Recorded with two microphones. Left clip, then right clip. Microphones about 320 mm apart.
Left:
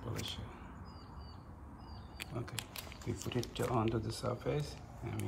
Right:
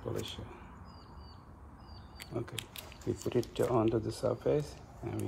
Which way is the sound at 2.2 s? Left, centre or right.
Centre.